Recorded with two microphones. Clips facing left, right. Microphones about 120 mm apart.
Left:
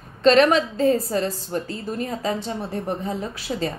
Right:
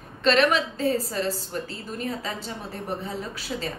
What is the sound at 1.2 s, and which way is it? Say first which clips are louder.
Speech: left 2 dB; 35° right (ahead or behind).